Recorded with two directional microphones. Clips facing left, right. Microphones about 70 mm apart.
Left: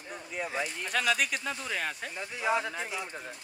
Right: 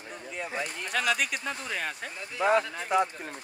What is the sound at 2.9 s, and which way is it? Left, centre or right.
Speech, right.